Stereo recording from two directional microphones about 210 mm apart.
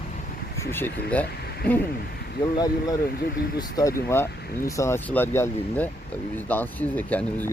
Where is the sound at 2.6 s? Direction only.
20° left (ahead or behind).